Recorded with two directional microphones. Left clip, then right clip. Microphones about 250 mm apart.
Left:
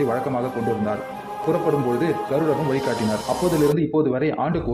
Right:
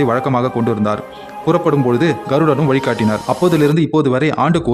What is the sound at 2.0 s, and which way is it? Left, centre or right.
Speech, right.